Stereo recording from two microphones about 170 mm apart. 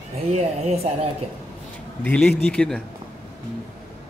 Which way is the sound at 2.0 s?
5° left (ahead or behind).